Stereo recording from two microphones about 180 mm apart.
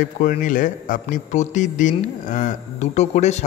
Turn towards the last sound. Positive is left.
turn(degrees=40)  # may be behind; listen again after turning